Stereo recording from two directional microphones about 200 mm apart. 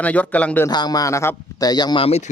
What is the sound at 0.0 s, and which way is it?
Speech, 5° left (ahead or behind).